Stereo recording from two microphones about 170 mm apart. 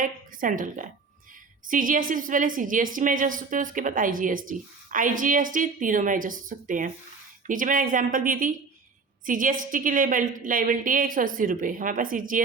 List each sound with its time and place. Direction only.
0.0 s a woman's voice: 50° right (ahead or behind)